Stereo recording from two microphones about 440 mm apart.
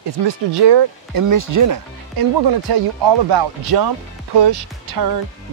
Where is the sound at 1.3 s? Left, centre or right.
Right.